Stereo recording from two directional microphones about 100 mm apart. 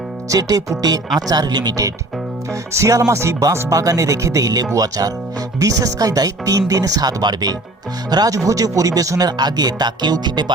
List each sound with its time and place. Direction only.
0.3 s speech: 40° right (ahead or behind)